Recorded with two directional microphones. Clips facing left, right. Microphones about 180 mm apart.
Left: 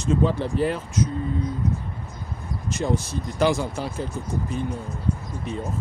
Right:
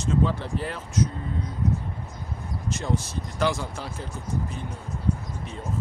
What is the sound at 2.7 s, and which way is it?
Speech, 15° left (ahead or behind).